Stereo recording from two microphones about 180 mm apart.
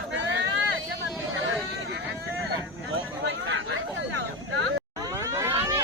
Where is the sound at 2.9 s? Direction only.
90° right.